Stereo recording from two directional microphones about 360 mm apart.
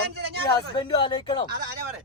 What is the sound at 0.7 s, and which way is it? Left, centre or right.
Speech, centre.